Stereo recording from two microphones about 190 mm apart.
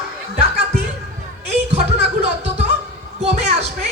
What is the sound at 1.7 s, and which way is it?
Music, 35° right (ahead or behind).